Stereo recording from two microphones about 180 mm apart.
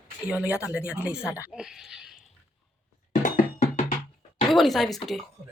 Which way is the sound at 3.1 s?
40° left (ahead or behind).